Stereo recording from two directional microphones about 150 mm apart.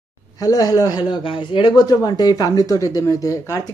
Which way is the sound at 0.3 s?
25° left (ahead or behind).